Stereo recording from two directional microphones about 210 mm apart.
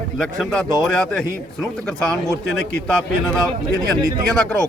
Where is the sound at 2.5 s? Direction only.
5° left (ahead or behind).